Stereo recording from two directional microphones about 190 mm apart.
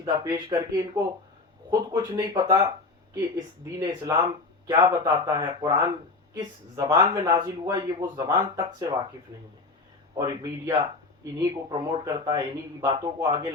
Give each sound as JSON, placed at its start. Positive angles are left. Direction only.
{"t": 0.0, "sound": "speech", "side_deg": -20}
{"t": 10.2, "sound": "speech", "side_deg": -15}